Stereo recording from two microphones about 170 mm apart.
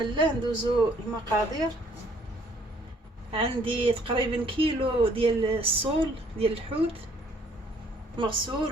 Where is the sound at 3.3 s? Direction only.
30° right (ahead or behind).